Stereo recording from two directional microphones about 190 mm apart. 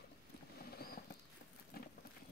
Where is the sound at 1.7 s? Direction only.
55° left (ahead or behind).